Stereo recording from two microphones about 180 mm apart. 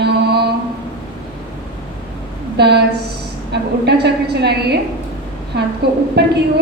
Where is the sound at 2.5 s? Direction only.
65° right (ahead or behind).